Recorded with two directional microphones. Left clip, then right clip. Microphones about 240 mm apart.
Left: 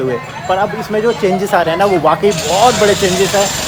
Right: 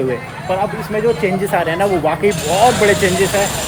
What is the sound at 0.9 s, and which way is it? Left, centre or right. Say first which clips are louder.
Speech: left 2 dB; centre.